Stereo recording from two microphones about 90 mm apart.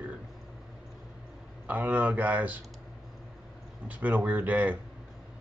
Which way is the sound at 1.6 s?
15° right (ahead or behind).